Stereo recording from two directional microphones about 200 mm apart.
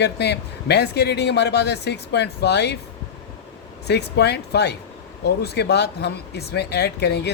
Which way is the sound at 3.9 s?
55° left (ahead or behind).